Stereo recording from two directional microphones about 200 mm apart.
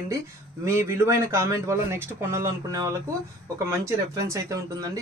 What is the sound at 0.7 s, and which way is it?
A man's voice, 15° right (ahead or behind).